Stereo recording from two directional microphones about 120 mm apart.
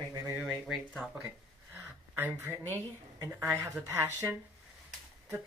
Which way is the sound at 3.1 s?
30° right (ahead or behind).